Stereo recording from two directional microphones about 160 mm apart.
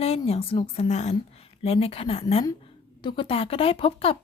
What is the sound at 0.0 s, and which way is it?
A woman's voice, 40° left (ahead or behind).